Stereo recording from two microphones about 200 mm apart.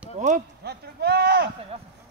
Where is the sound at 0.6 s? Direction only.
55° right (ahead or behind).